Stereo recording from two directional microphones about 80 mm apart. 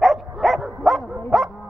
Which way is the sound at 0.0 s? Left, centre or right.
Centre.